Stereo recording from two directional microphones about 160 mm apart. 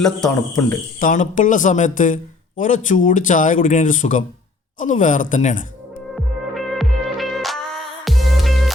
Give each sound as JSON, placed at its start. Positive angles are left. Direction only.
{"t": 0.0, "sound": "speech", "side_deg": 5}
{"t": 0.9, "sound": "a man's voice", "side_deg": 55}
{"t": 6.1, "sound": "music", "side_deg": 0}